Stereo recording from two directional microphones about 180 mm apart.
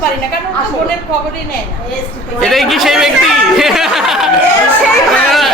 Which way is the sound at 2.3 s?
Centre (ahead or behind).